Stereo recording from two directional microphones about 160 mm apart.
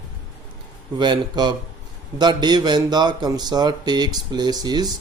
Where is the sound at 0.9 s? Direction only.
30° right (ahead or behind).